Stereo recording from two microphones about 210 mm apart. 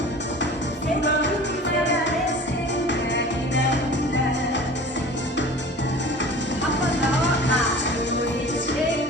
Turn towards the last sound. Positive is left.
turn(degrees=60)  # may be behind; listen again after turning